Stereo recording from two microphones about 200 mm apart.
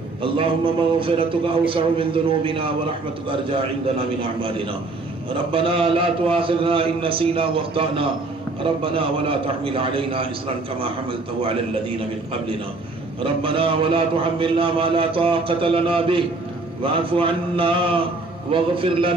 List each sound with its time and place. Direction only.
0.9 s a man's voice: 25° right (ahead or behind)
4.2 s a man's voice: 25° right (ahead or behind)
13.2 s a man's voice: 25° right (ahead or behind)